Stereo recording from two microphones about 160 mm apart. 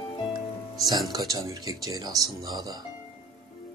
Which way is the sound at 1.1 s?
20° right (ahead or behind).